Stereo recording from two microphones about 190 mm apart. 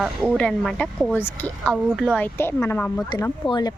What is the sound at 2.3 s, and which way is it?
Speech, 15° left (ahead or behind).